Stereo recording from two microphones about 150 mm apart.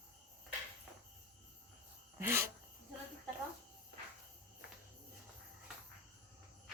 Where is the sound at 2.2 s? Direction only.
15° right (ahead or behind).